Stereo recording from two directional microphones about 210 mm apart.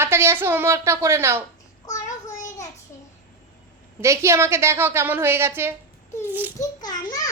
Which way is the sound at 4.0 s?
15° right (ahead or behind).